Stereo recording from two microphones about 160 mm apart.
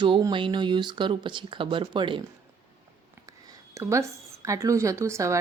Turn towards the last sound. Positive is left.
turn(degrees=-20)  # may be behind; listen again after turning